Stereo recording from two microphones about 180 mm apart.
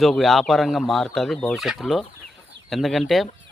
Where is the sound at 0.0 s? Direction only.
Centre (ahead or behind).